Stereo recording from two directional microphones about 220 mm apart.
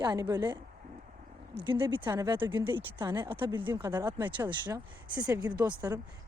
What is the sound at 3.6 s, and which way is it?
Speech, 10° right (ahead or behind).